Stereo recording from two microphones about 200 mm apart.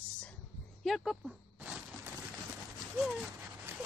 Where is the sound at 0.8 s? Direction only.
Centre (ahead or behind).